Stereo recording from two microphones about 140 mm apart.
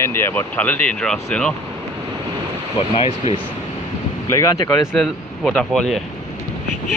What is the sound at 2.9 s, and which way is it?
Speech, 45° left (ahead or behind).